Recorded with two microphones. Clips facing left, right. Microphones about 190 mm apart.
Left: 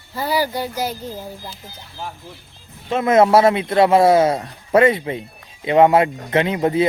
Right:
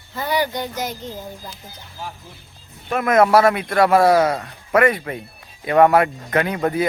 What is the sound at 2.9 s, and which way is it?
Speech, 25° left (ahead or behind).